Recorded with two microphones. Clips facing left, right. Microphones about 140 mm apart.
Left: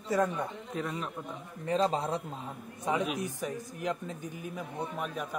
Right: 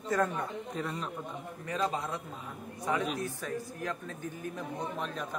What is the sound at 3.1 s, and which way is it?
Speech, 15° left (ahead or behind).